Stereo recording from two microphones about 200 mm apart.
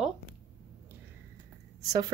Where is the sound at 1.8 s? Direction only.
15° right (ahead or behind).